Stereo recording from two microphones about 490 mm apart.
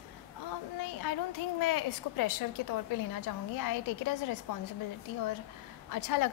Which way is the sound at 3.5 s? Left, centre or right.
Left.